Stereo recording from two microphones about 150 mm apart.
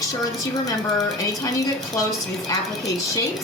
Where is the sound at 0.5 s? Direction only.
25° left (ahead or behind).